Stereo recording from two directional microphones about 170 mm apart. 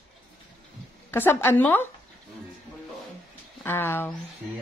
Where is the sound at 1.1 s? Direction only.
15° left (ahead or behind).